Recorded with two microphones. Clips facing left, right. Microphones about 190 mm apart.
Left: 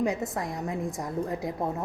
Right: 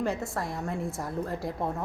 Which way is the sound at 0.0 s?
15° left (ahead or behind).